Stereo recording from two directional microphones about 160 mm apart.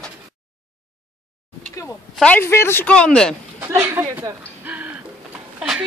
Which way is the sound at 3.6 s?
15° right (ahead or behind).